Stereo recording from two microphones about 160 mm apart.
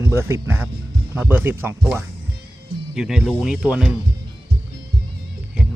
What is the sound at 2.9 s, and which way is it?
Speech, 5° right (ahead or behind).